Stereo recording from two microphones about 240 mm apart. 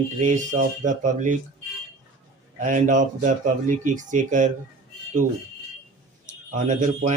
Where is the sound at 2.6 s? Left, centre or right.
Right.